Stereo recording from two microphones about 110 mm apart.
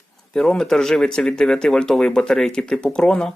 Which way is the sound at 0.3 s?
5° left (ahead or behind).